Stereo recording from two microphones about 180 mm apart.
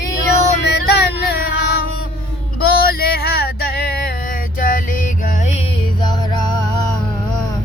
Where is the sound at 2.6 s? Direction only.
60° left (ahead or behind); by 5.6 s 40° left (ahead or behind).